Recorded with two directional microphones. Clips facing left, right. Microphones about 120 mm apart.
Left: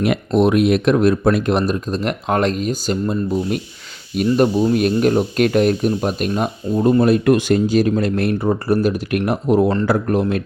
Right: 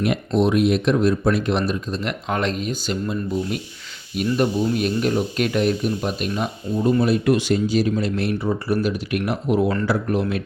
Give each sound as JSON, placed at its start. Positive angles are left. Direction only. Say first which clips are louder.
{"t": 0.3, "sound": "speech", "louder": "left 4 dB", "side_deg": 60}